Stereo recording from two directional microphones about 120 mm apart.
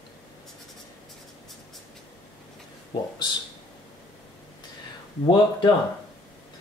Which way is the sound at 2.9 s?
40° left (ahead or behind).